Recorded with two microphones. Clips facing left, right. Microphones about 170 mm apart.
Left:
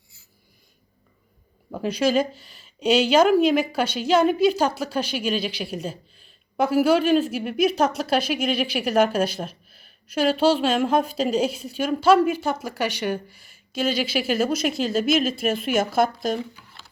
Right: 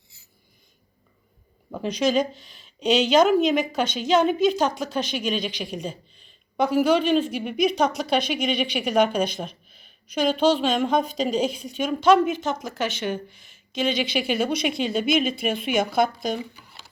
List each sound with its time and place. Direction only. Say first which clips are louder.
1.7 s speech: left 1 dB; 10° left (ahead or behind)